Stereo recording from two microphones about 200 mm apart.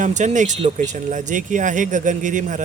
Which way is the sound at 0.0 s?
35° right (ahead or behind).